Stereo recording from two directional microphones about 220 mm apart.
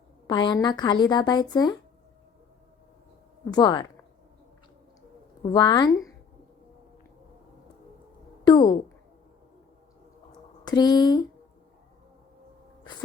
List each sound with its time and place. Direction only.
0.3 s speech: 20° left (ahead or behind)
3.5 s speech: 20° left (ahead or behind)
5.4 s speech: 20° left (ahead or behind)
8.4 s speech: 20° left (ahead or behind)
10.3 s a sound: 20° left (ahead or behind)